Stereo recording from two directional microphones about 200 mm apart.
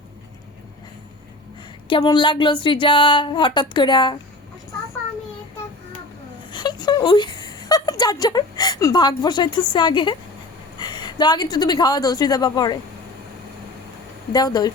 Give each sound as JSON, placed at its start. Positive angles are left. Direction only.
{"t": 1.9, "sound": "speech", "side_deg": 20}
{"t": 6.5, "sound": "a sound", "side_deg": 20}
{"t": 9.7, "sound": "a woman's voice", "side_deg": 25}
{"t": 14.3, "sound": "speech", "side_deg": 20}